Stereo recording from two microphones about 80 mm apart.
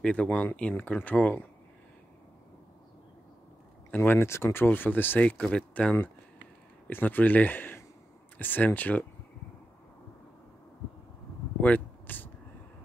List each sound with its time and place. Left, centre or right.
0.0 s speech: centre
3.9 s speech: left
11.6 s a sound: left